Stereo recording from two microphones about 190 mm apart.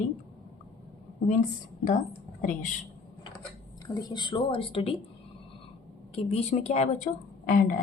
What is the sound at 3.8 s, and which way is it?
A woman's voice, 20° left (ahead or behind).